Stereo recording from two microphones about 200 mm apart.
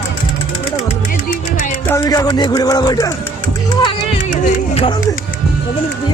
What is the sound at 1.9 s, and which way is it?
Speech, 15° left (ahead or behind).